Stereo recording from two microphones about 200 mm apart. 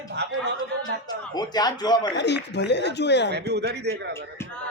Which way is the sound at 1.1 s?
20° left (ahead or behind).